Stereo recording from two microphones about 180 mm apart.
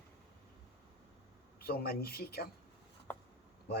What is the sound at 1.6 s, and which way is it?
Speech, 55° left (ahead or behind).